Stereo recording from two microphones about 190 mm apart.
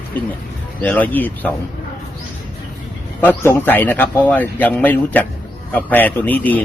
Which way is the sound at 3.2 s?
10° left (ahead or behind).